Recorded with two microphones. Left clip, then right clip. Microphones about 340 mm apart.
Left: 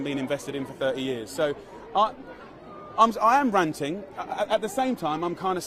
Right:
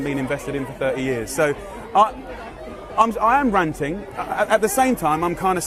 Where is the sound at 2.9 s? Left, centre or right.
Right.